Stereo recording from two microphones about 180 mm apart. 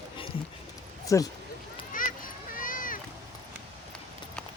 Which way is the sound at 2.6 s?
50° left (ahead or behind).